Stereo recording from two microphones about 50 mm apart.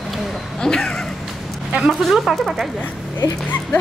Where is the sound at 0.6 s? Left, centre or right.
Centre.